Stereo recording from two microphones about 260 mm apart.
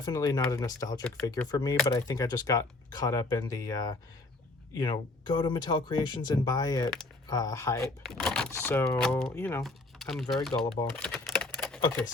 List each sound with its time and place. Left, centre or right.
0.0 s speech: centre
10.9 s typewriter: centre